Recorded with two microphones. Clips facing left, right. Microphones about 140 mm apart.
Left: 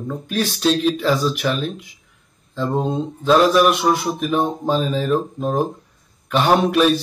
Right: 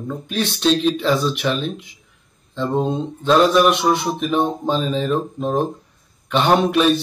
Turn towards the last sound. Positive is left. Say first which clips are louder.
# even
turn(degrees=0)  # may be behind; listen again after turning